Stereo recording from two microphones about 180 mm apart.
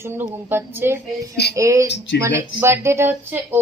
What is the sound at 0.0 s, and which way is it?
A woman's voice, 10° right (ahead or behind).